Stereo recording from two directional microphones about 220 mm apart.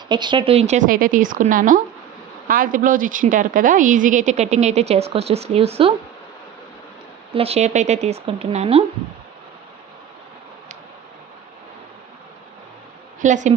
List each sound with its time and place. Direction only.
0.1 s a woman's voice: 20° right (ahead or behind)
7.3 s speech: 25° right (ahead or behind)
13.2 s a woman's voice: 35° right (ahead or behind)